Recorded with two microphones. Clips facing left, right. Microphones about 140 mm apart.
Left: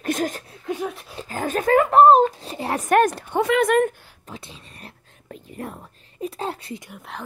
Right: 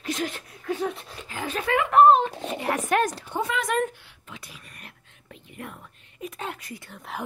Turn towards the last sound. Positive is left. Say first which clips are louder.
# left 3 dB
turn(degrees=10)  # may be behind; listen again after turning